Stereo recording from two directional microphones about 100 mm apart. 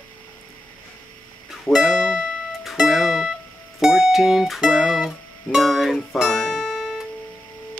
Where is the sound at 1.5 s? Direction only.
5° right (ahead or behind).